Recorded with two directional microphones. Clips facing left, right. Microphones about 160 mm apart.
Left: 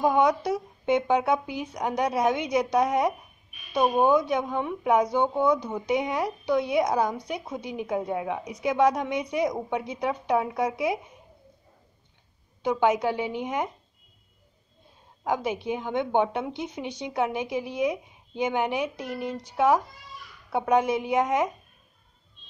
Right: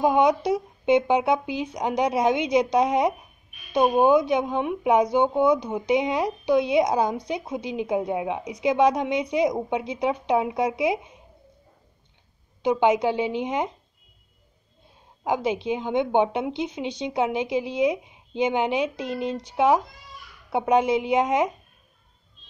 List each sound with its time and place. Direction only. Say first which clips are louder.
0.0 s speech: right 2 dB; 20° right (ahead or behind)
12.6 s speech: right 3 dB; 20° right (ahead or behind)
15.2 s speech: right 3 dB; 20° right (ahead or behind)